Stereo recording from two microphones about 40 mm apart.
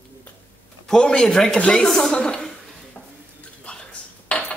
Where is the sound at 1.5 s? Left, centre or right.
Left.